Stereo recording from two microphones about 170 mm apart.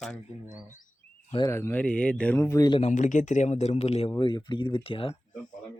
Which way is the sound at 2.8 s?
45° left (ahead or behind).